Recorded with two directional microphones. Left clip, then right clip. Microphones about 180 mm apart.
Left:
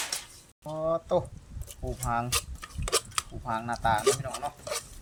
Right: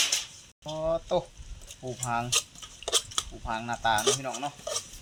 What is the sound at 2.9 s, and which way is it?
Cutlery, 15° left (ahead or behind).